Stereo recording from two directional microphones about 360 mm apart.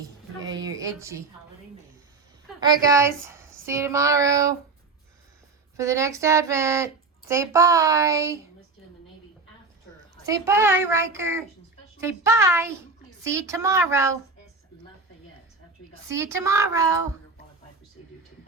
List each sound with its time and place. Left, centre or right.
0.3 s a sound: right
0.6 s a sound: centre
2.6 s speech: centre
5.7 s speech: centre
10.2 s speech: centre
16.0 s speech: centre